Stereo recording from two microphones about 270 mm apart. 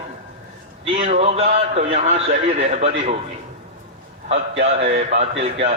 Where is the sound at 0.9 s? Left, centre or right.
Right.